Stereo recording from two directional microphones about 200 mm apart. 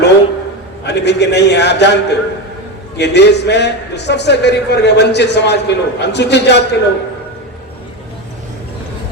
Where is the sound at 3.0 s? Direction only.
55° left (ahead or behind).